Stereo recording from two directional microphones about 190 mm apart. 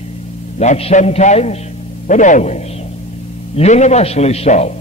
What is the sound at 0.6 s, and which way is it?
A man's voice, 35° left (ahead or behind).